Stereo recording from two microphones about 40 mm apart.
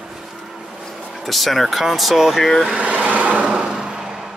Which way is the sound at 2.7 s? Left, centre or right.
Right.